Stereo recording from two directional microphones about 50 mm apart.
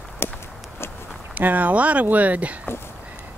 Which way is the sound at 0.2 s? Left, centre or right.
Left.